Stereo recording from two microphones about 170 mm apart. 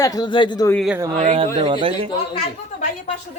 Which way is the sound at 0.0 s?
25° left (ahead or behind).